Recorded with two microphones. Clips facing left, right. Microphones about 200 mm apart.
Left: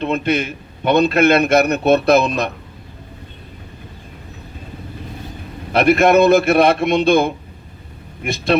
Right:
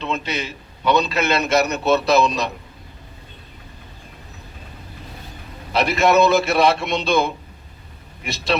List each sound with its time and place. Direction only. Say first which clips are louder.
0.0 s a man's voice: left 7 dB; 55° left (ahead or behind)
5.7 s a man's voice: left 4 dB; 55° left (ahead or behind)